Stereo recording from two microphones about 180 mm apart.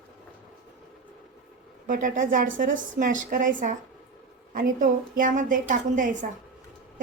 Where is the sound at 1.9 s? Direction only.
50° right (ahead or behind).